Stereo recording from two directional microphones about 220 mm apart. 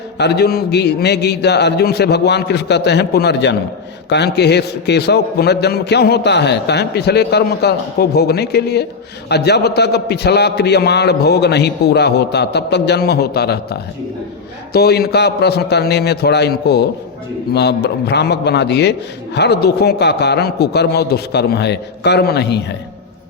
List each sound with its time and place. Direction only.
0.2 s a man's voice: 45° left (ahead or behind)